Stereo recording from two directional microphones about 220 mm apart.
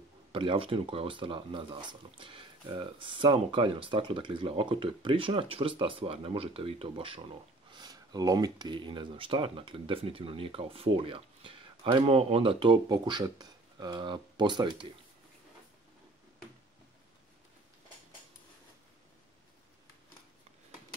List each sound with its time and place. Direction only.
0.3 s speech: 20° right (ahead or behind)